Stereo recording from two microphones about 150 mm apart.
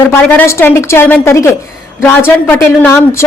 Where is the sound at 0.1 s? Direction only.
15° left (ahead or behind).